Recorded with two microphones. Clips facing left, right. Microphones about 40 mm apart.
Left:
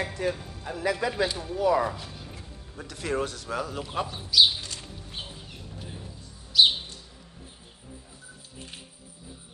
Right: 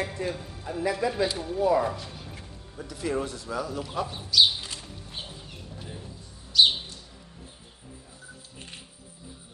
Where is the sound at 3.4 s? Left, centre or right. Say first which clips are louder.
Even; left.